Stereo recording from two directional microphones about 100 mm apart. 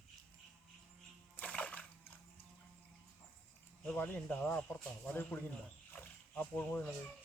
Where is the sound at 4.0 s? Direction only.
20° left (ahead or behind).